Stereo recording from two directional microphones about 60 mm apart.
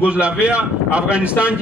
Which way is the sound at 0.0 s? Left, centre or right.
Centre.